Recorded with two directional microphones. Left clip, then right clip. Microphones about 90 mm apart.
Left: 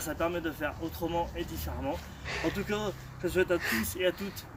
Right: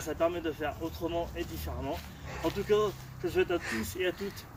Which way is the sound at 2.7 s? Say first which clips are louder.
Right 6 dB; 40° left (ahead or behind).